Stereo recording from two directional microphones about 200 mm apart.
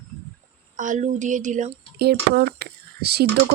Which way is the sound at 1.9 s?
55° right (ahead or behind).